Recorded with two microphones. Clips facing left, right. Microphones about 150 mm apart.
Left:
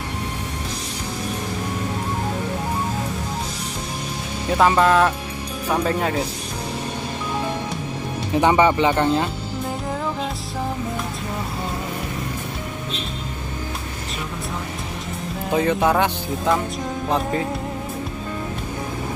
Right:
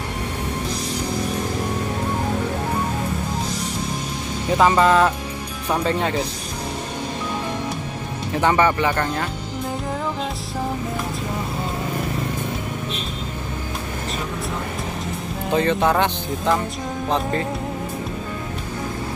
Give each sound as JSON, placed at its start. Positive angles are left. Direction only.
{"t": 4.6, "sound": "speech", "side_deg": 0}
{"t": 8.3, "sound": "speech", "side_deg": 15}
{"t": 15.5, "sound": "speech", "side_deg": 5}